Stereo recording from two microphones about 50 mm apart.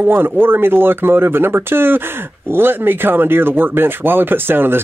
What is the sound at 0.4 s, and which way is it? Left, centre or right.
Speech, right.